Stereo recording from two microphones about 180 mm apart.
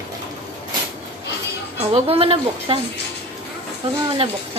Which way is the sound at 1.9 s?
30° right (ahead or behind).